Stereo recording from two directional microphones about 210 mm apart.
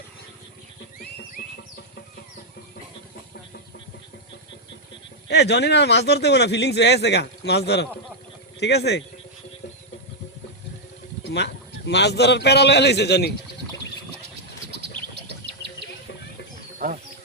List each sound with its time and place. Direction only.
1.4 s music: 45° left (ahead or behind)
5.3 s speech: 50° left (ahead or behind)
11.2 s a man's voice: 55° left (ahead or behind)
14.7 s bird: 50° right (ahead or behind)
16.8 s a sound: 40° right (ahead or behind)